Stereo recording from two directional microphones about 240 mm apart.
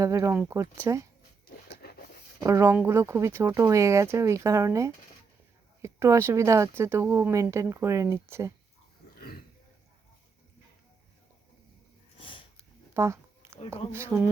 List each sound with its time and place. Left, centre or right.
0.0 s speech: centre
1.8 s writing: left
2.4 s speech: centre
9.0 s a sound: left
12.1 s sniff: left
12.9 s a sound: centre
13.9 s speech: centre